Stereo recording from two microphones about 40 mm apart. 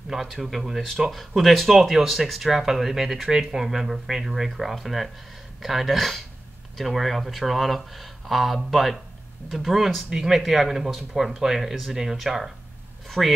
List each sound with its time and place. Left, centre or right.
0.1 s speech: centre
13.2 s speech: centre